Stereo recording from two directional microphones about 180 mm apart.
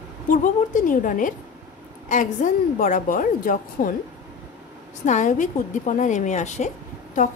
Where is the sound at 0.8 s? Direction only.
50° left (ahead or behind).